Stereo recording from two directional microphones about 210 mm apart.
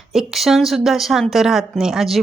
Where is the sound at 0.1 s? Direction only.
Centre (ahead or behind).